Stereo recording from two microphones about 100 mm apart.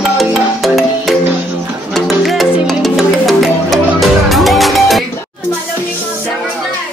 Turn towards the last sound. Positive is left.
turn(degrees=0)  # may be behind; listen again after turning